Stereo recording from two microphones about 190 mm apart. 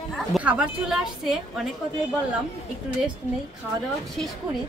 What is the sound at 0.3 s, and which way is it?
A woman's voice, 5° right (ahead or behind).